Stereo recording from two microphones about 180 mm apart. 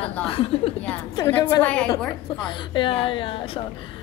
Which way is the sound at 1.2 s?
20° left (ahead or behind).